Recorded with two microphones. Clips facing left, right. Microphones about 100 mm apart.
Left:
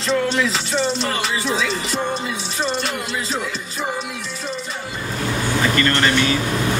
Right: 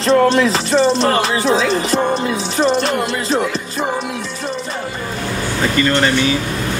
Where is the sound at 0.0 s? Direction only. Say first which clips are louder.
Right 7 dB; 70° right (ahead or behind).